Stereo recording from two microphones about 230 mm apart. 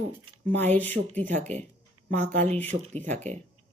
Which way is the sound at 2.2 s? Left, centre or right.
Right.